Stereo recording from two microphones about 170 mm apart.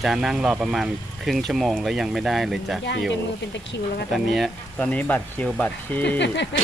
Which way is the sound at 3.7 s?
90° left.